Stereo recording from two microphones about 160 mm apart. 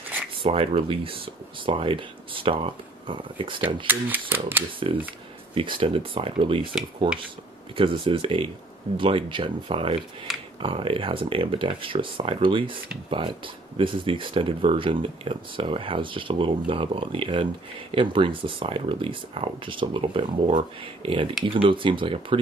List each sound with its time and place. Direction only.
0.4 s speech: 35° right (ahead or behind)
3.8 s speech: 10° right (ahead or behind)
5.5 s speech: 30° right (ahead or behind)
7.7 s speech: 30° right (ahead or behind)
13.7 s speech: 30° right (ahead or behind)